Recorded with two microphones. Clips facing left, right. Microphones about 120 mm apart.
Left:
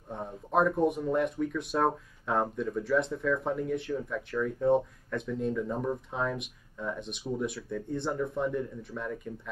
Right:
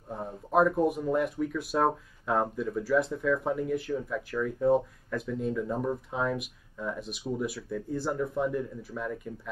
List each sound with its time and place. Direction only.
0.1 s speech: centre (ahead or behind)